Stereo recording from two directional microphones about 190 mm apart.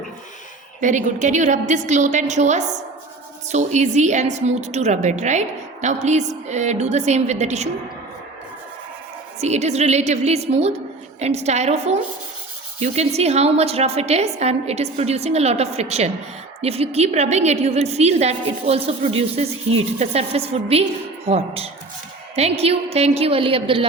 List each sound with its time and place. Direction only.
0.8 s a woman's voice: 40° right (ahead or behind)
9.4 s a woman's voice: 35° right (ahead or behind)